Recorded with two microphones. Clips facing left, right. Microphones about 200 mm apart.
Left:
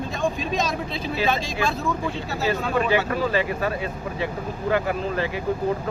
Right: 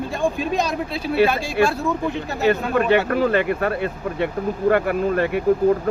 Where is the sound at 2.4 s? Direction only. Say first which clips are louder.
Right 5 dB; 55° right (ahead or behind).